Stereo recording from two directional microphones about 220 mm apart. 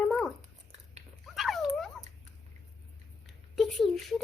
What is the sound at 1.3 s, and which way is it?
Dog, centre (ahead or behind).